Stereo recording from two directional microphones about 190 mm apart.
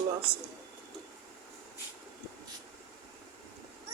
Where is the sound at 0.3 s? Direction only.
30° right (ahead or behind).